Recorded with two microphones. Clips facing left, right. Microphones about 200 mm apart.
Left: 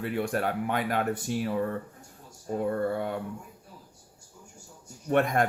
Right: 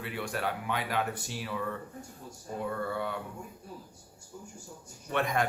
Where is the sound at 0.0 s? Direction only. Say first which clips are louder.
Left 6 dB; 45° left (ahead or behind).